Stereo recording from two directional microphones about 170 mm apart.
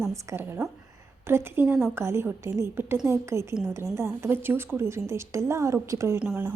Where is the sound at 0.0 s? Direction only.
15° right (ahead or behind).